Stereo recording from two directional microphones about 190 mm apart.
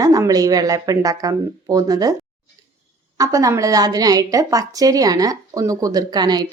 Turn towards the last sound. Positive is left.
turn(degrees=-20)  # may be behind; listen again after turning